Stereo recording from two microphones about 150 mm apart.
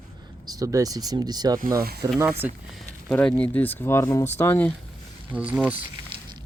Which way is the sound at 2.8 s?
5° left (ahead or behind).